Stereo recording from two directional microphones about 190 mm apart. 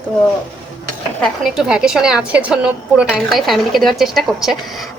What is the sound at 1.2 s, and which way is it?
A woman's voice, centre (ahead or behind).